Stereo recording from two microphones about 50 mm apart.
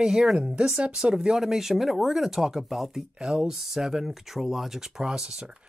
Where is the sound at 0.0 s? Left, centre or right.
Centre.